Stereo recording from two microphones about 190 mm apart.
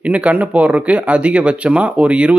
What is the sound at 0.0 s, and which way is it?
A man's voice, 5° right (ahead or behind).